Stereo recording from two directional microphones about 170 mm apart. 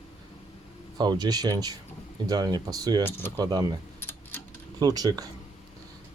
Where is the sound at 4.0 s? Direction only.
15° left (ahead or behind).